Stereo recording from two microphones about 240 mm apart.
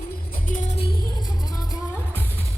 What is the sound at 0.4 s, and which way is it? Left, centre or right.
Music, left.